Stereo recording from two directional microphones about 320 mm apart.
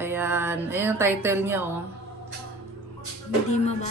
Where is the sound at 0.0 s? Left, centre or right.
Centre.